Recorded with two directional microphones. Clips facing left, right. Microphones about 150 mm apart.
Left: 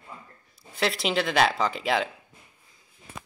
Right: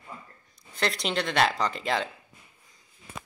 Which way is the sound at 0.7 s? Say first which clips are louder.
Left 3 dB; 5° left (ahead or behind).